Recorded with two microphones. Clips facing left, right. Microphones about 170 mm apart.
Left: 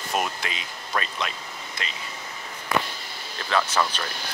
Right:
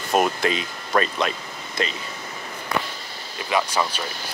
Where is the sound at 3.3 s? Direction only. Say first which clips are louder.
Right 1 dB; 10° right (ahead or behind).